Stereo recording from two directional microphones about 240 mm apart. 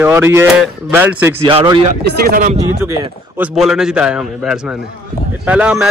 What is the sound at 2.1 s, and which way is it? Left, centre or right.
Speech, right.